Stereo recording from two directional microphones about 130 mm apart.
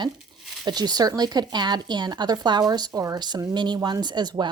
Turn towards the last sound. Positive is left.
turn(degrees=-35)  # may be behind; listen again after turning